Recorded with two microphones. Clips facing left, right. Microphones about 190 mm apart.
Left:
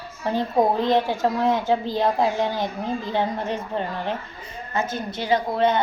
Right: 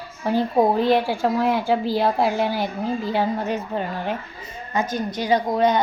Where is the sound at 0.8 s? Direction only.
10° right (ahead or behind).